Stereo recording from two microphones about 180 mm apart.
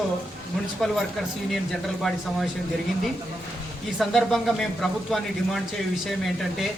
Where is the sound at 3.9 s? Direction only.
Centre (ahead or behind).